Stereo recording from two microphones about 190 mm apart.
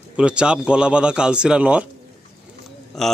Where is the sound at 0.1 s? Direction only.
5° right (ahead or behind).